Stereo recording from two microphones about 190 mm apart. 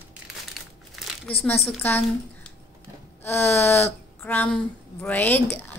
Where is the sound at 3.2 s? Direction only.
10° left (ahead or behind).